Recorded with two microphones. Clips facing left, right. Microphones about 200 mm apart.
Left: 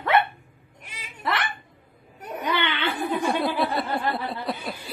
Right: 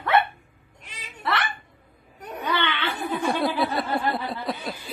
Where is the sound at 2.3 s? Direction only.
10° left (ahead or behind).